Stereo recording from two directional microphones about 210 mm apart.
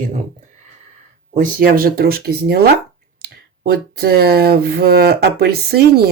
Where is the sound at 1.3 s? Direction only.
40° right (ahead or behind).